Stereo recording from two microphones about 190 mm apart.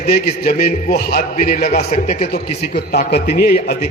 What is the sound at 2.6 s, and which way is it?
A man's voice, 55° left (ahead or behind).